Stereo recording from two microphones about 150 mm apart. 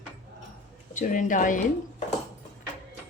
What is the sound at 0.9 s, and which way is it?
Speech, 60° left (ahead or behind).